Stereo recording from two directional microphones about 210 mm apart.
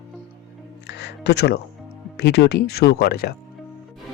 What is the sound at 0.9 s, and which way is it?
Speech, 55° left (ahead or behind).